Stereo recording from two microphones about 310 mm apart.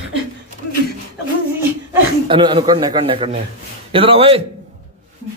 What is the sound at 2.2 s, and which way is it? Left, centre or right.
A man's voice, centre.